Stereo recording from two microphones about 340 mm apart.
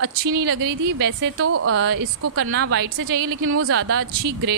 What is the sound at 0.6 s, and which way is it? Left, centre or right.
Speech, right.